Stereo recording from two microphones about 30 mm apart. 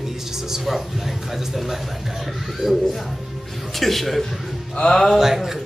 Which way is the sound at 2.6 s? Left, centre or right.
Centre.